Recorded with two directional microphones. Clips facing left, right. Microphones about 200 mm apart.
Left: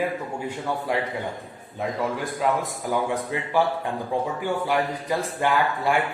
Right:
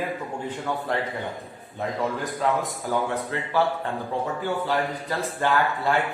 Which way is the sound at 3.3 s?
15° left (ahead or behind).